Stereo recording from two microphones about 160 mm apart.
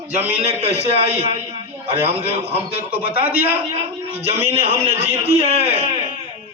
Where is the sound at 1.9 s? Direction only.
40° right (ahead or behind).